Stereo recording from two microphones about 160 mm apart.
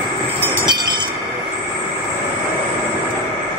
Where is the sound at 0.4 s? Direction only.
30° right (ahead or behind).